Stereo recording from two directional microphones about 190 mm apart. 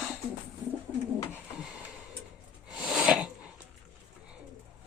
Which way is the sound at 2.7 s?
Centre (ahead or behind).